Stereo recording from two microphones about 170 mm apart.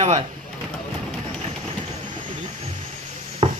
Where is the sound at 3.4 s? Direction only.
30° right (ahead or behind).